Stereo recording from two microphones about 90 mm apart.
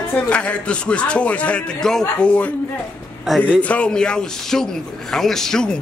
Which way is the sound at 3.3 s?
15° left (ahead or behind).